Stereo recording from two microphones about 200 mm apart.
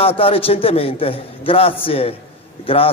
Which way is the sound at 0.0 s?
30° left (ahead or behind).